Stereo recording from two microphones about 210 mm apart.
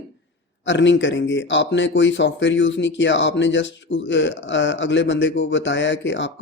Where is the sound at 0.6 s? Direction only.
60° left (ahead or behind).